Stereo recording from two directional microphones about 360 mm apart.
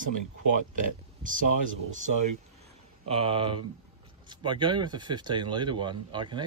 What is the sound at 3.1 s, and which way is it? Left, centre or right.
A man's voice, centre.